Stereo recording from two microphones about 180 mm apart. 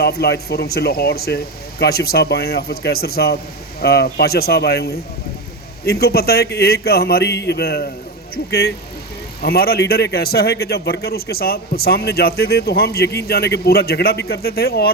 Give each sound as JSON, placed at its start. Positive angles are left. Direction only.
{"t": 0.0, "sound": "a man's voice", "side_deg": 60}